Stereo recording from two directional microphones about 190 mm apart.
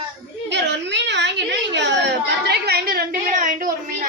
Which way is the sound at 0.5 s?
65° right (ahead or behind).